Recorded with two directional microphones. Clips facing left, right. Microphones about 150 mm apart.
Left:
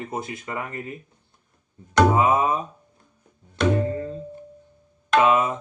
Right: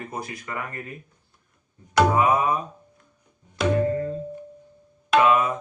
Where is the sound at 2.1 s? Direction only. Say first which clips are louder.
Left 1 dB; 20° left (ahead or behind).